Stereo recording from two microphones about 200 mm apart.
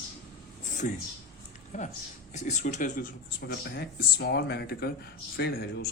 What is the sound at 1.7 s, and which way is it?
Speech, 35° left (ahead or behind).